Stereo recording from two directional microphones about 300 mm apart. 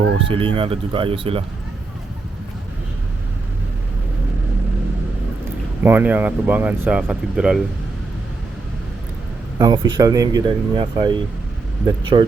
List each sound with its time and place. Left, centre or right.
0.3 s speech: centre
5.8 s speech: centre
9.6 s speech: centre